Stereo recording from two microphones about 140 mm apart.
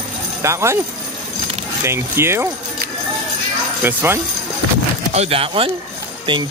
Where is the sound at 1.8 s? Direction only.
20° right (ahead or behind).